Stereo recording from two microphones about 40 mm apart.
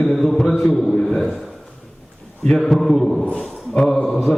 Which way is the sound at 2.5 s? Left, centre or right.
Centre.